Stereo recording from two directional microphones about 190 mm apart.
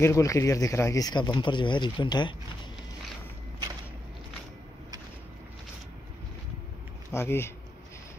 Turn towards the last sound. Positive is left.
turn(degrees=15)  # may be behind; listen again after turning